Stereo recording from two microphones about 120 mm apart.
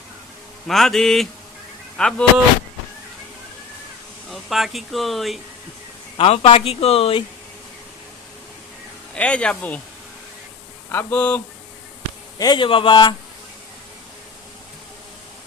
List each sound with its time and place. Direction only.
0.7 s speech: centre (ahead or behind)
4.3 s speech: centre (ahead or behind)
6.1 s speech: 55° left (ahead or behind)
9.1 s speech: 10° left (ahead or behind)
10.9 s speech: 15° left (ahead or behind)
12.4 s speech: 40° left (ahead or behind)